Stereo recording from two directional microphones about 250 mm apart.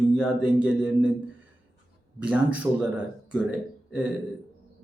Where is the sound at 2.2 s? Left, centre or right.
Centre.